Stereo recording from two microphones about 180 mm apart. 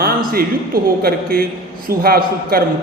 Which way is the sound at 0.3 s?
55° right (ahead or behind).